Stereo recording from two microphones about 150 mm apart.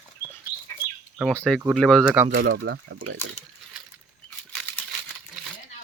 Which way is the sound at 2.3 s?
90° right.